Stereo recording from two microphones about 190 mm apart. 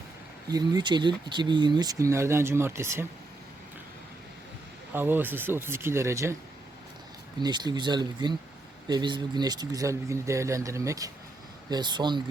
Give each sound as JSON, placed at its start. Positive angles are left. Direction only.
{"t": 0.5, "sound": "speech", "side_deg": -20}
{"t": 4.9, "sound": "speech", "side_deg": -10}
{"t": 7.3, "sound": "speech", "side_deg": -25}